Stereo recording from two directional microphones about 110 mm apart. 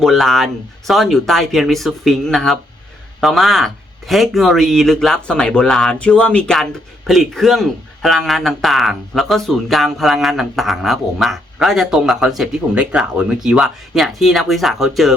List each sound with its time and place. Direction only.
0.0 s a man's voice: centre (ahead or behind)